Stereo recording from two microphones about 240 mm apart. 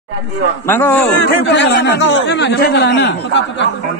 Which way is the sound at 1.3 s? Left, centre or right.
Left.